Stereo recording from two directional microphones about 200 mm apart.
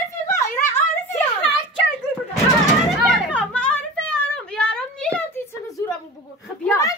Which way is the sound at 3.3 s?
5° left (ahead or behind).